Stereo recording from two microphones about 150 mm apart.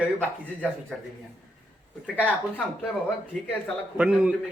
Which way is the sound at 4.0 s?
5° right (ahead or behind).